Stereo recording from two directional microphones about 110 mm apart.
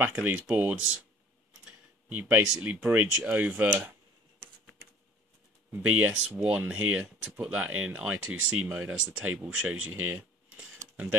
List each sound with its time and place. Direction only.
0.0 s speech: 15° right (ahead or behind)
5.7 s speech: 20° right (ahead or behind)
10.8 s a sound: 90° right